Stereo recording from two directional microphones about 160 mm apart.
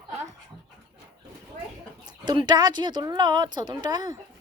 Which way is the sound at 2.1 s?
30° right (ahead or behind).